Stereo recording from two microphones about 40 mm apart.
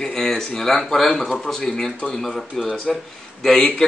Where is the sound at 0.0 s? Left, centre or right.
Centre.